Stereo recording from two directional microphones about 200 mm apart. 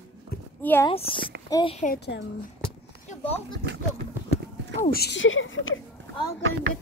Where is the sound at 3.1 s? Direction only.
30° left (ahead or behind).